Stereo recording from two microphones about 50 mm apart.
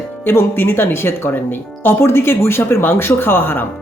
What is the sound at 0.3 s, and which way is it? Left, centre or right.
Speech, left.